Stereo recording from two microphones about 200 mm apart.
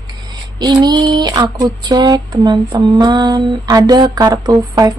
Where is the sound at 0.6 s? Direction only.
20° right (ahead or behind).